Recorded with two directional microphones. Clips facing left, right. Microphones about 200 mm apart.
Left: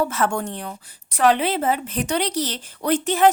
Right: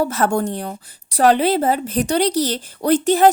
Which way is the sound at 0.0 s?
40° right (ahead or behind).